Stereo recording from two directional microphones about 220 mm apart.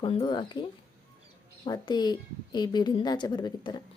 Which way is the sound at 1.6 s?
20° left (ahead or behind).